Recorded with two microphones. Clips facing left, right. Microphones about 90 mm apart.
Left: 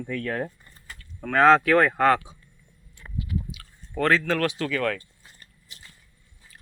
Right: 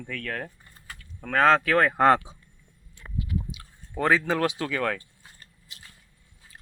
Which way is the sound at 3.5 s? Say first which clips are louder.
Left 2 dB; 20° right (ahead or behind).